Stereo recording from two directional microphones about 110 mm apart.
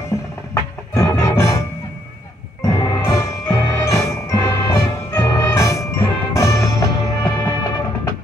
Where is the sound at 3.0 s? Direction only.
25° left (ahead or behind).